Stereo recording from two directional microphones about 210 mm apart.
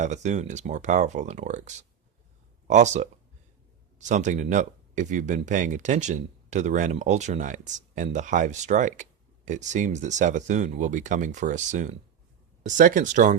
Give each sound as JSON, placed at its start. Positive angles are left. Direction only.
{"t": 0.0, "sound": "speech", "side_deg": -35}